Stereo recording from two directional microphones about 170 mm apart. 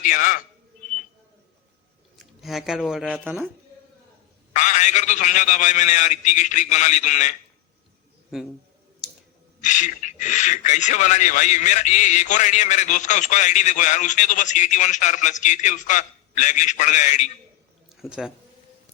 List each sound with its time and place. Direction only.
0.0 s a man's voice: 50° left (ahead or behind)
2.1 s speech: centre (ahead or behind)
4.5 s speech: 45° left (ahead or behind)
8.3 s a man's voice: centre (ahead or behind)
9.6 s speech: 45° left (ahead or behind)
17.9 s speech: 5° right (ahead or behind)